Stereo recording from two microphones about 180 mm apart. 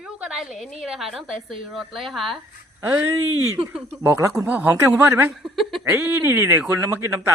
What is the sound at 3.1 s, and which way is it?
Speech, 90° right.